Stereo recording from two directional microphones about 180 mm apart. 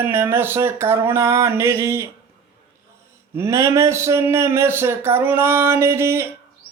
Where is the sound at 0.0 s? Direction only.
10° right (ahead or behind).